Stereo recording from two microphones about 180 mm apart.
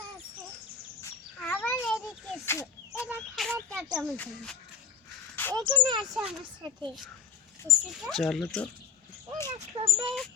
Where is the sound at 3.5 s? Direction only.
10° right (ahead or behind).